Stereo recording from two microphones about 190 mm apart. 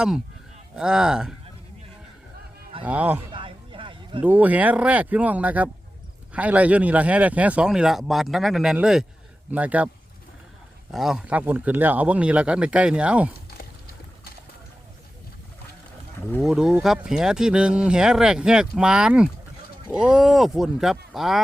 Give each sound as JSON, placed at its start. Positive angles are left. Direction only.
{"t": 0.8, "sound": "speech", "side_deg": -5}
{"t": 2.8, "sound": "speech", "side_deg": -10}
{"t": 3.3, "sound": "a sound", "side_deg": -25}
{"t": 4.2, "sound": "speech", "side_deg": -10}
{"t": 10.9, "sound": "speech", "side_deg": 0}
{"t": 16.4, "sound": "speech", "side_deg": -5}